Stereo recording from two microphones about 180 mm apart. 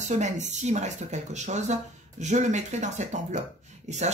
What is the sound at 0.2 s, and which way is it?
Speech, 40° right (ahead or behind).